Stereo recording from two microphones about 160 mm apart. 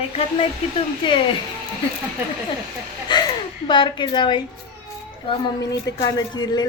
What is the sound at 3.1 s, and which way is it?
A man's voice, 30° left (ahead or behind).